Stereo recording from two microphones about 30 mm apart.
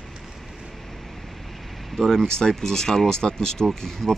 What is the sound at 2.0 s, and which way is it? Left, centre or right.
Speech, centre.